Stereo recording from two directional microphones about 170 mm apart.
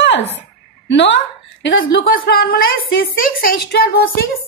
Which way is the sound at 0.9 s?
90° left.